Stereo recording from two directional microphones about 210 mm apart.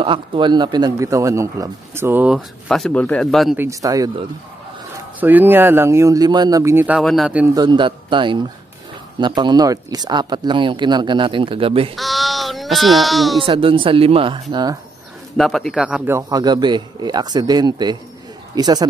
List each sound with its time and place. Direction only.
0.0 s speech: 25° right (ahead or behind); by 3.5 s centre (ahead or behind)
3.5 s speech: 15° right (ahead or behind)
5.2 s speech: 10° right (ahead or behind)
7.5 s speech: 20° right (ahead or behind)
11.9 s a sound: centre (ahead or behind)
13.5 s speech: 25° right (ahead or behind)
15.3 s a man's voice: centre (ahead or behind); by 18.9 s 20° right (ahead or behind)